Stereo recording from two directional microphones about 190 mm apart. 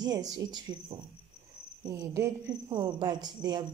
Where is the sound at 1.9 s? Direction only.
15° right (ahead or behind).